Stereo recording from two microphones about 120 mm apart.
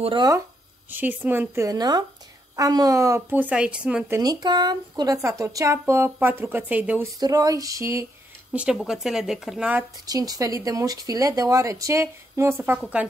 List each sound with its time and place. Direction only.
0.0 s speech: 40° right (ahead or behind)
0.8 s speech: 15° right (ahead or behind)
4.2 s speech: 35° right (ahead or behind); by 7.1 s 15° right (ahead or behind)
7.2 s speech: 30° right (ahead or behind)
8.7 s a woman's voice: 5° right (ahead or behind)
10.0 s speech: 30° right (ahead or behind)